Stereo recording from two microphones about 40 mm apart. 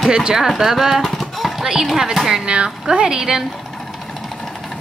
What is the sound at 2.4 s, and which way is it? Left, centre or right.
Speech, right.